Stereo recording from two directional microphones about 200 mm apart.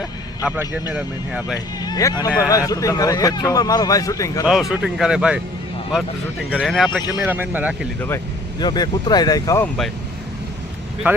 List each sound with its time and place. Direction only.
0.4 s speech: 10° right (ahead or behind)
1.8 s vehicle: 20° left (ahead or behind)
2.2 s speech: 15° left (ahead or behind)
4.7 s speech: 5° right (ahead or behind)
6.5 s speech: 5° right (ahead or behind)
7.1 s speech: 10° right (ahead or behind)
8.0 s speech: 15° left (ahead or behind)
11.1 s speech: 5° right (ahead or behind)